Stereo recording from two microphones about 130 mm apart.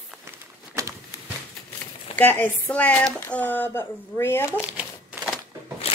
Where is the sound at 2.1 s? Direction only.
15° left (ahead or behind).